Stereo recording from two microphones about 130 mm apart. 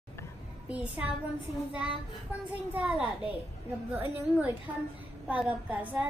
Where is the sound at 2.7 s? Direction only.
10° right (ahead or behind).